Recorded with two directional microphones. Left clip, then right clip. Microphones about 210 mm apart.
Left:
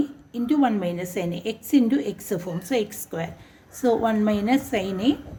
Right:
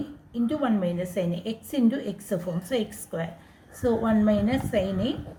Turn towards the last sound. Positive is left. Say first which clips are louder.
# left 2 dB
turn(degrees=40)  # may be behind; listen again after turning